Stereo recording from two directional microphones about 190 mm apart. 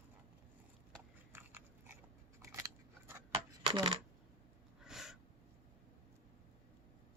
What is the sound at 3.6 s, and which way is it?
Speech, 20° right (ahead or behind).